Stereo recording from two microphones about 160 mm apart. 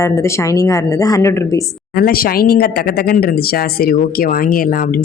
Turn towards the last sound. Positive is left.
turn(degrees=60)  # may be behind; listen again after turning